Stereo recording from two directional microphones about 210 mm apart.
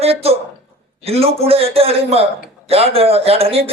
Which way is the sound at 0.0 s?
30° right (ahead or behind).